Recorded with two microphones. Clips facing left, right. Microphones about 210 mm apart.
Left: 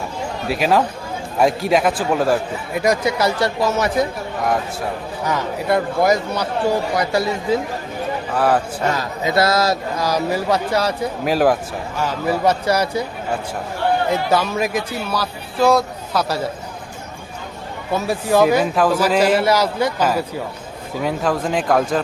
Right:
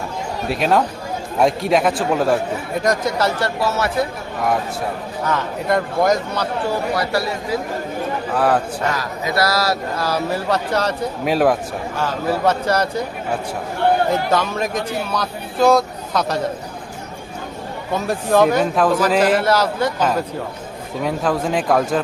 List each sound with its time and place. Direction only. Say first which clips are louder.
0.4 s speech: even; centre (ahead or behind); by 4.0 s 15° left (ahead or behind)
5.2 s speech: even; 10° left (ahead or behind)
8.4 s speech: even; centre (ahead or behind)
8.9 s speech: left 5 dB; 25° left (ahead or behind); by 11.5 s centre (ahead or behind)
12.3 s speech: left 1 dB; 10° left (ahead or behind)
14.3 s speech: left 1 dB; 10° left (ahead or behind)
17.9 s speech: even; 5° left (ahead or behind)